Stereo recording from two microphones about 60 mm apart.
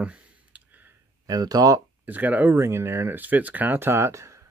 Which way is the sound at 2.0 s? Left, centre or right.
Right.